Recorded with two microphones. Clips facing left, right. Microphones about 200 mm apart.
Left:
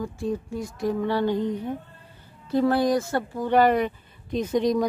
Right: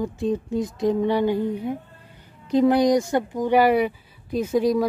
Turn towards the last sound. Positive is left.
turn(degrees=-5)  # may be behind; listen again after turning